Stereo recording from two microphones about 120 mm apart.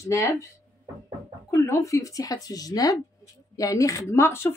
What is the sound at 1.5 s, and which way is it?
Speech, 25° left (ahead or behind).